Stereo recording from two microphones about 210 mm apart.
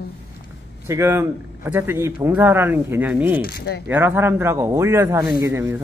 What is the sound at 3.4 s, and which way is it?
Speech, 50° left (ahead or behind).